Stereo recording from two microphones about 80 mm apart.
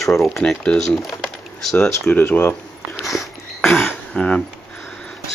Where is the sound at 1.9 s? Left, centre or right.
Left.